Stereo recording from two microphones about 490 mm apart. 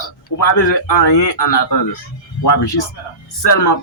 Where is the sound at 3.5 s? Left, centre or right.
Left.